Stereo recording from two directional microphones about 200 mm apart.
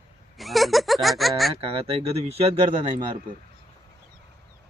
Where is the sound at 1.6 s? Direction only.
30° right (ahead or behind).